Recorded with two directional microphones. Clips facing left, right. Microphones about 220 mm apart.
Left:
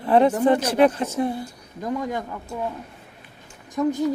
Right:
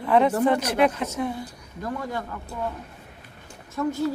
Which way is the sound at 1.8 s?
20° left (ahead or behind).